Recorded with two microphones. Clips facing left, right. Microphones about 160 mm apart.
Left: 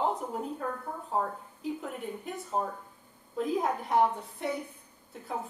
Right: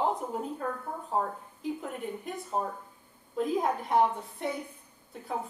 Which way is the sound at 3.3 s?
Centre (ahead or behind).